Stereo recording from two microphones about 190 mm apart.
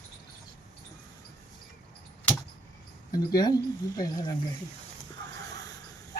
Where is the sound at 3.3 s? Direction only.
20° left (ahead or behind).